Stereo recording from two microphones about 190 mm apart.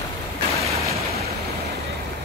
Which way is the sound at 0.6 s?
15° right (ahead or behind).